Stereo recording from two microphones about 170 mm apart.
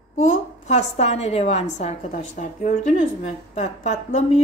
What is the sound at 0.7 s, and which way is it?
A woman's voice, 40° left (ahead or behind).